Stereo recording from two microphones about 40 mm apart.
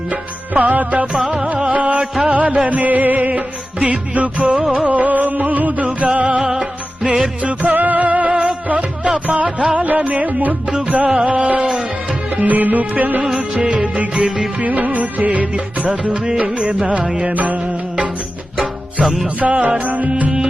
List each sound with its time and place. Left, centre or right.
0.1 s music: right
1.5 s music: right
2.3 s music: right
4.5 s music of bollywood: right
4.9 s music: right
6.4 s music: centre
7.4 s music: right
13.2 s music of bollywood: right
13.8 s music: right
14.6 s music: right
19.0 s music: centre
19.4 s music: right